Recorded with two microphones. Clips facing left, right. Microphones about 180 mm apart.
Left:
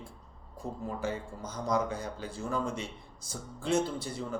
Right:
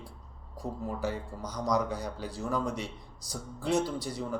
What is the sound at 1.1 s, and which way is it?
Speech, 25° left (ahead or behind).